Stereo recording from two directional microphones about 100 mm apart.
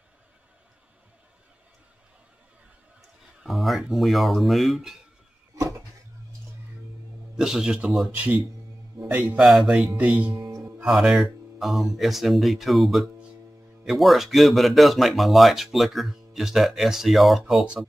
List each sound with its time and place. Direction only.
3.4 s speech: centre (ahead or behind)
7.3 s speech: 5° right (ahead or behind)
8.1 s a man's voice: 15° right (ahead or behind)
9.4 s speech: centre (ahead or behind)
9.9 s a man's voice: 15° right (ahead or behind)
10.3 s music: 35° right (ahead or behind)
10.9 s speech: 5° right (ahead or behind)